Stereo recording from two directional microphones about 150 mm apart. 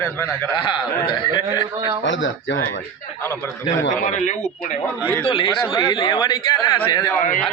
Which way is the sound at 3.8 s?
60° left (ahead or behind).